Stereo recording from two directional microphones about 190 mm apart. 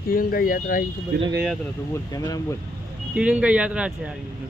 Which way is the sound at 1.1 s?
60° right (ahead or behind).